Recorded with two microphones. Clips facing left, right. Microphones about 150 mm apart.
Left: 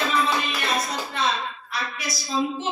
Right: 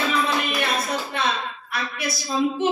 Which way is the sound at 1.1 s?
60° right (ahead or behind).